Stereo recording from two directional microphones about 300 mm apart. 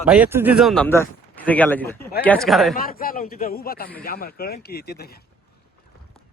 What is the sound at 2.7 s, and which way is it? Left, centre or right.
A man's voice, left.